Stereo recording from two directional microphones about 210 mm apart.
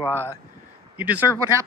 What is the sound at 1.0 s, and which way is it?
Speech, 10° right (ahead or behind).